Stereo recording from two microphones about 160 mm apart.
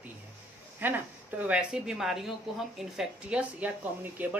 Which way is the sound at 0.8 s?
10° right (ahead or behind).